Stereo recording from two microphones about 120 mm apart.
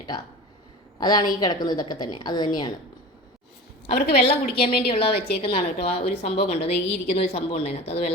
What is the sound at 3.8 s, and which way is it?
A woman's voice, 60° left (ahead or behind).